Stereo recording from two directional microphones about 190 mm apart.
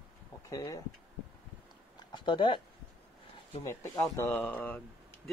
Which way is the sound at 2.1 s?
25° left (ahead or behind).